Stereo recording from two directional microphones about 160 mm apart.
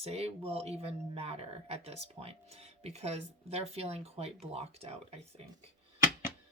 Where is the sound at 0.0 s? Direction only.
40° right (ahead or behind).